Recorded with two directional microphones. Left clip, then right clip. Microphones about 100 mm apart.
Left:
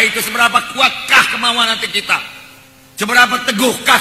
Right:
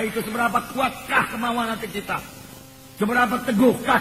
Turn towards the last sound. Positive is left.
turn(degrees=-25)  # may be behind; listen again after turning